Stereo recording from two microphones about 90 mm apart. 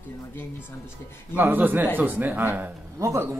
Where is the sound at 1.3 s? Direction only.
20° right (ahead or behind).